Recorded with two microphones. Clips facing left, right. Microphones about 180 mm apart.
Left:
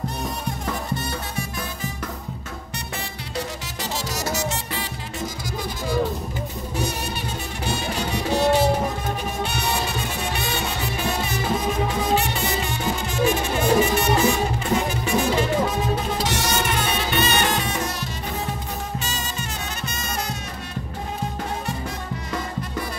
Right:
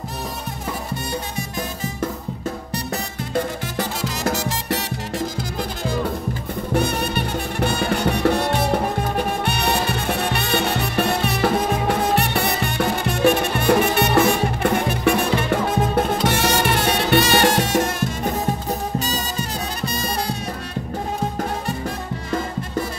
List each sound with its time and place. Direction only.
6.7 s music: 60° right (ahead or behind)
18.9 s music: 35° right (ahead or behind)